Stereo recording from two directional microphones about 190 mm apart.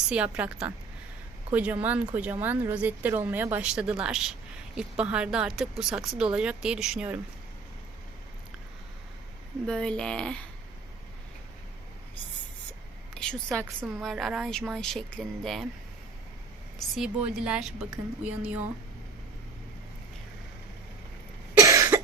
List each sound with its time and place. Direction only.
0.1 s a woman's voice: 5° right (ahead or behind)
9.6 s speech: 5° left (ahead or behind)
13.1 s a woman's voice: 5° left (ahead or behind)
16.7 s speech: centre (ahead or behind)
21.6 s cough: 15° right (ahead or behind)